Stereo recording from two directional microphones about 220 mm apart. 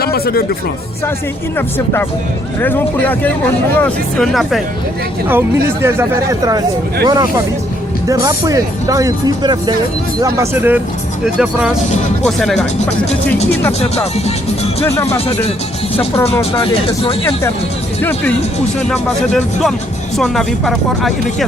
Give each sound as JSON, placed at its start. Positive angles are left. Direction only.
{"t": 0.0, "sound": "speech", "side_deg": 45}
{"t": 1.5, "sound": "speech", "side_deg": 10}
{"t": 5.3, "sound": "speech", "side_deg": -10}
{"t": 13.7, "sound": "speech", "side_deg": 30}
{"t": 16.4, "sound": "speech", "side_deg": 25}
{"t": 18.0, "sound": "speech", "side_deg": 5}